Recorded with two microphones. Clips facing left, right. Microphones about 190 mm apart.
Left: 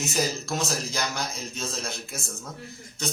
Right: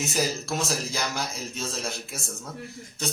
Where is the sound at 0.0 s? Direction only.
Centre (ahead or behind).